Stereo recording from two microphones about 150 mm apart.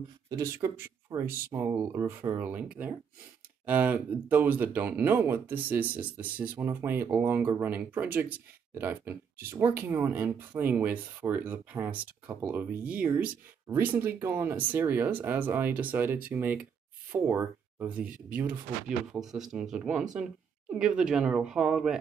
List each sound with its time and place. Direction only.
0.3 s speech: 20° right (ahead or behind); by 21.9 s 5° right (ahead or behind)